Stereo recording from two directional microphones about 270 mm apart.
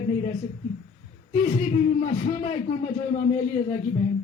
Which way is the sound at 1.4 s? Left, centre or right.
Left.